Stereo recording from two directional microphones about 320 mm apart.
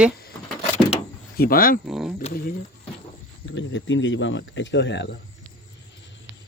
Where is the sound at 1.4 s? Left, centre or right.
Left.